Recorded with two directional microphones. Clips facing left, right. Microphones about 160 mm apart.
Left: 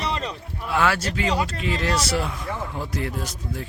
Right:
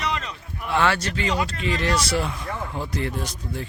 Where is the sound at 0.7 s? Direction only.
5° left (ahead or behind).